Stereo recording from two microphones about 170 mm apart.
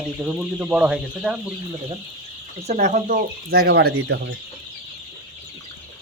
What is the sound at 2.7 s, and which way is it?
Speech, 45° right (ahead or behind).